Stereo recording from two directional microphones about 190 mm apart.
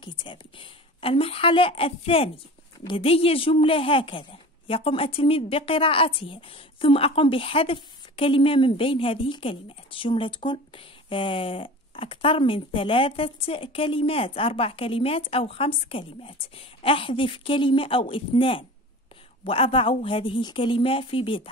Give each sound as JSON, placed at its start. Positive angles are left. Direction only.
{"t": 0.0, "sound": "a woman's voice", "side_deg": 25}